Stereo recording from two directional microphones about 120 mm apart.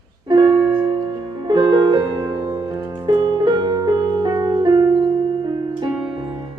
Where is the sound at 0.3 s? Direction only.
40° right (ahead or behind).